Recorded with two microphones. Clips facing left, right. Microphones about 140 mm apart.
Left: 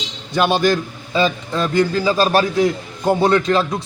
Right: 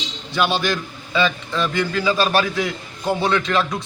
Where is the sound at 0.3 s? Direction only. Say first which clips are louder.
Left 5 dB; 45° left (ahead or behind).